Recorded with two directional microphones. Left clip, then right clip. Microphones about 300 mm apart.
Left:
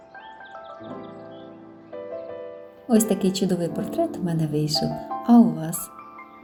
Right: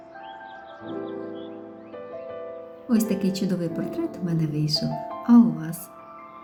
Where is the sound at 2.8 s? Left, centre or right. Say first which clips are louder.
Left 4 dB; centre.